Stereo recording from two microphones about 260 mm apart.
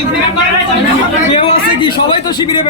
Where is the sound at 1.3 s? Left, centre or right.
Left.